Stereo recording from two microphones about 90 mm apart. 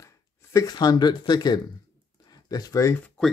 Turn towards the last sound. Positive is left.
turn(degrees=5)  # may be behind; listen again after turning